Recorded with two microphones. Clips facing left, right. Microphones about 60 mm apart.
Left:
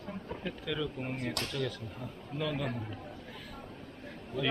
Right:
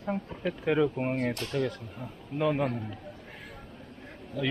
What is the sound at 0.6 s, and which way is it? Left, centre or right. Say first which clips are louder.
A man's voice: right 12 dB; right.